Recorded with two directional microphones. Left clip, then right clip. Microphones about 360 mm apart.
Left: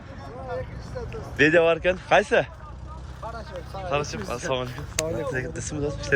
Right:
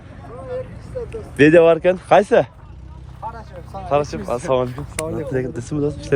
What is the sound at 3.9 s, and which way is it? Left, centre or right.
Speech, centre.